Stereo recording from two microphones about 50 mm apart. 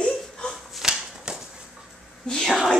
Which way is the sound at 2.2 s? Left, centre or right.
Centre.